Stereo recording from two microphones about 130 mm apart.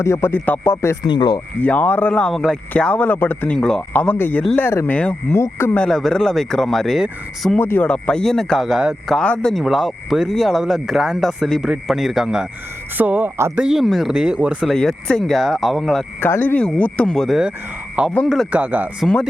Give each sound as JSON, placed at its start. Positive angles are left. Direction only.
{"t": 0.0, "sound": "speech", "side_deg": 20}
{"t": 1.0, "sound": "speech", "side_deg": 35}
{"t": 1.6, "sound": "speech", "side_deg": 10}
{"t": 5.8, "sound": "speech", "side_deg": 5}
{"t": 7.6, "sound": "speech", "side_deg": 15}
{"t": 13.0, "sound": "speech", "side_deg": -15}
{"t": 14.7, "sound": "speech", "side_deg": 5}
{"t": 16.2, "sound": "speech", "side_deg": 15}
{"t": 19.0, "sound": "speech", "side_deg": 0}